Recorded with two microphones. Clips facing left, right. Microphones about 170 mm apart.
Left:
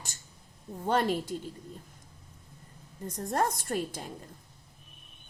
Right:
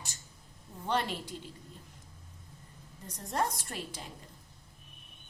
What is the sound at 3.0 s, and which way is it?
A woman's voice, 50° left (ahead or behind).